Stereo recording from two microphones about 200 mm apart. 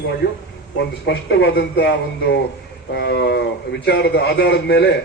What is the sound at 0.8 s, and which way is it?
A man's voice, 60° left (ahead or behind).